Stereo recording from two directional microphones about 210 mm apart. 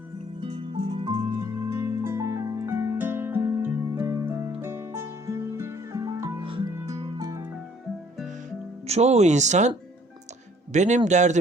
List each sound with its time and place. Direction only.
0.4 s music: 25° right (ahead or behind)
1.6 s music: 15° right (ahead or behind)
8.9 s speech: 30° right (ahead or behind)